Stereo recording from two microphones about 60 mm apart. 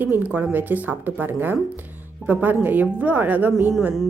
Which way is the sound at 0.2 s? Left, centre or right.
Right.